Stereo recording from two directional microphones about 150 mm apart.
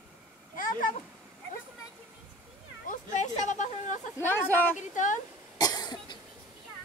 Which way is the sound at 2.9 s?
55° left (ahead or behind).